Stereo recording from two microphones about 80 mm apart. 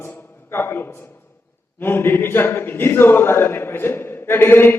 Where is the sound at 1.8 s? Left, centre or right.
Left.